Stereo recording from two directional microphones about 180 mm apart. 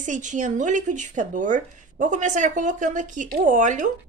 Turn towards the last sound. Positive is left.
turn(degrees=-45)  # may be behind; listen again after turning